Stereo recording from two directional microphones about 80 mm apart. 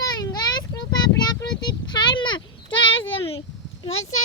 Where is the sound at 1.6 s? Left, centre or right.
Left.